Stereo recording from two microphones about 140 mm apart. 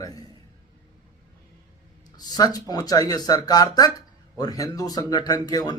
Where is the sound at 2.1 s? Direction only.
30° left (ahead or behind).